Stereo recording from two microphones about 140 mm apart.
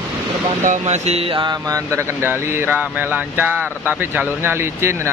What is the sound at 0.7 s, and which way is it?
Speech, 55° right (ahead or behind).